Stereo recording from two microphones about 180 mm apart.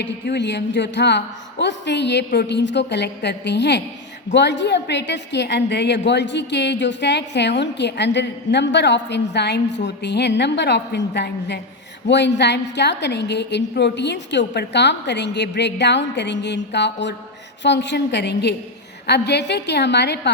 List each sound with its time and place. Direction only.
0.0 s a woman's voice: 75° left (ahead or behind)